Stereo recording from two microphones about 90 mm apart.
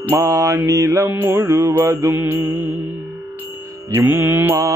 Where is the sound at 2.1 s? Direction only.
25° right (ahead or behind).